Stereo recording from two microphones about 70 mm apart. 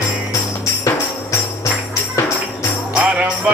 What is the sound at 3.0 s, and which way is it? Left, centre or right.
Music, right.